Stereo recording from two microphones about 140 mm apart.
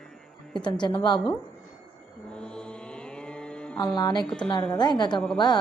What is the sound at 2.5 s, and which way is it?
Mantra, 5° left (ahead or behind).